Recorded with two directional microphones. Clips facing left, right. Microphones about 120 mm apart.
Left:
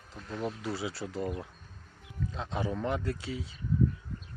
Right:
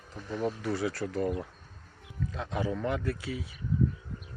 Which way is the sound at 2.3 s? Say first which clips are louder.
Right 2 dB; 20° left (ahead or behind).